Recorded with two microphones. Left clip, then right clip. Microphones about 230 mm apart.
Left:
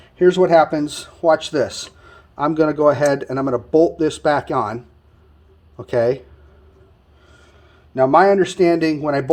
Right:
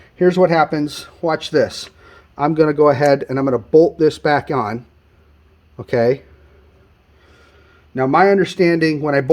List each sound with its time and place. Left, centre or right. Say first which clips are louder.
0.2 s speech: left 1 dB; right
5.7 s speech: right 2 dB; right
7.9 s speech: left 1 dB; right